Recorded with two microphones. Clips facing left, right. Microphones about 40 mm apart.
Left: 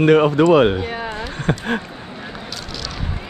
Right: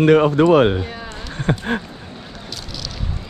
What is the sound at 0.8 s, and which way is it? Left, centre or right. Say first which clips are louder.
Speech: left 4 dB; left.